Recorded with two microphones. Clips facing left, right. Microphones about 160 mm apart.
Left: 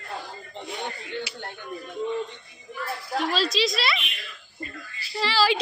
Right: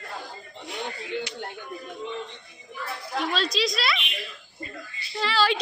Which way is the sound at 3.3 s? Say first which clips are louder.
Left 1 dB; centre (ahead or behind).